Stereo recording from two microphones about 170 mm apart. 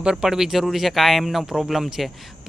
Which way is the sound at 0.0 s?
5° right (ahead or behind).